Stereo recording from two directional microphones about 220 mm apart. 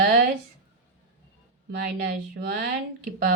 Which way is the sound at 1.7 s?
45° right (ahead or behind).